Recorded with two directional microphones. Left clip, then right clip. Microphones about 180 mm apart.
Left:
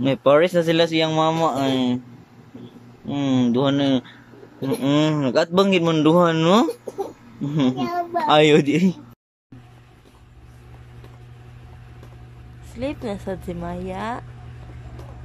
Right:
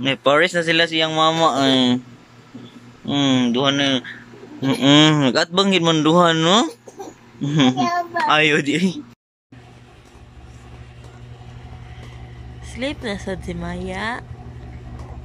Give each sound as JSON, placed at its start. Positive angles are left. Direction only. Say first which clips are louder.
{"t": 0.0, "sound": "speech", "louder": "even", "side_deg": 15}
{"t": 3.1, "sound": "speech", "louder": "right 3 dB", "side_deg": 10}
{"t": 4.6, "sound": "speech", "louder": "right 6 dB", "side_deg": 10}
{"t": 12.7, "sound": "speech", "louder": "right 2 dB", "side_deg": 10}